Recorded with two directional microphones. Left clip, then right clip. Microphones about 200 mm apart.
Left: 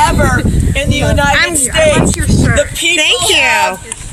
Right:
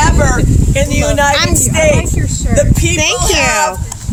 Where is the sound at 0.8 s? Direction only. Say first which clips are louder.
Right 1 dB; 5° right (ahead or behind).